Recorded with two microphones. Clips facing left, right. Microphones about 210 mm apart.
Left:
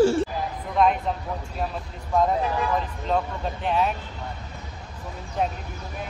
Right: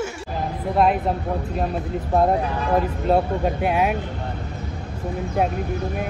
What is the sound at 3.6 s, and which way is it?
Speech, 10° right (ahead or behind).